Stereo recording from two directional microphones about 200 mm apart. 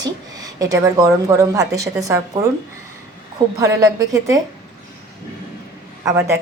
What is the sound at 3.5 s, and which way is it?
Speech, 15° right (ahead or behind).